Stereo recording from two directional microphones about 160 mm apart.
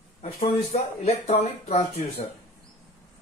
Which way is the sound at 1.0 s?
40° left (ahead or behind).